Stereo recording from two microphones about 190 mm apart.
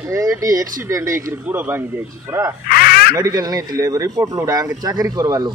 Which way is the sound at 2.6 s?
55° left (ahead or behind).